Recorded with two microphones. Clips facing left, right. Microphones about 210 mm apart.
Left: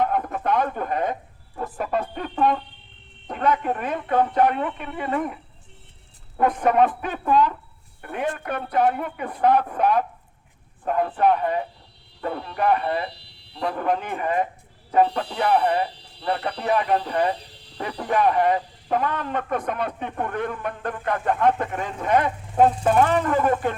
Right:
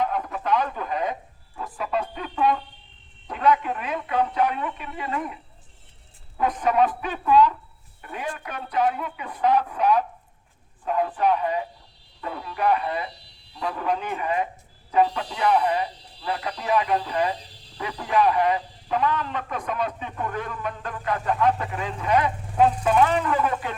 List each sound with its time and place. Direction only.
0.0 s radio: 55° left (ahead or behind)
1.5 s fowl: 55° left (ahead or behind)
3.2 s speech: 50° left (ahead or behind)